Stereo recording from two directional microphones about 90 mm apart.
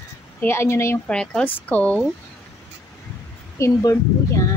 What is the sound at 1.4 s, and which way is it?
Speech, 20° left (ahead or behind).